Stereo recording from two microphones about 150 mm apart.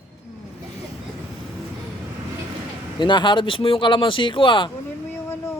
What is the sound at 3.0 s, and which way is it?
Speech, 30° left (ahead or behind).